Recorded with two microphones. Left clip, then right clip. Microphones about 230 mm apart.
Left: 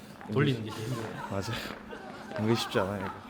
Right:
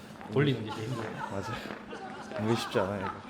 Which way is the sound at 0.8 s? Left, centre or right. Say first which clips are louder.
Right 1 dB; left.